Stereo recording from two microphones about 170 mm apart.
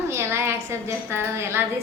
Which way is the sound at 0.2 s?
15° right (ahead or behind).